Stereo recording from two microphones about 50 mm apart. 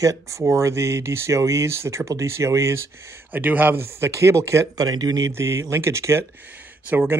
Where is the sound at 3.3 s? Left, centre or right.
Right.